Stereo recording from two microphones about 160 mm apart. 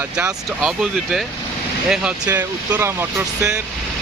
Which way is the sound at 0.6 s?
5° right (ahead or behind).